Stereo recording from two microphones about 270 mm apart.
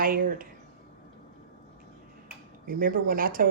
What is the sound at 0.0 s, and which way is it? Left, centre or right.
Speech, right.